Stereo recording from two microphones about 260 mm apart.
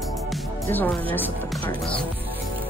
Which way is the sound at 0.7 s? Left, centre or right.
Centre.